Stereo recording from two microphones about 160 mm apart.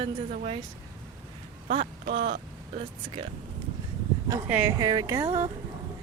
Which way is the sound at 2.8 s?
35° right (ahead or behind).